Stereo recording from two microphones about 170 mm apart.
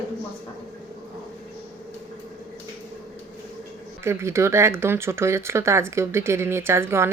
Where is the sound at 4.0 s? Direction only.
15° right (ahead or behind).